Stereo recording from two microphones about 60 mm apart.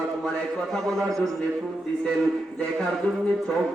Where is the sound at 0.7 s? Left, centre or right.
Centre.